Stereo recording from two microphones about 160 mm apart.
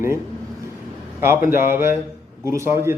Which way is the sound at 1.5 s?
15° right (ahead or behind).